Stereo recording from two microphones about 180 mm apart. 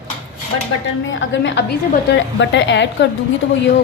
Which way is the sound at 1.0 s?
90° left.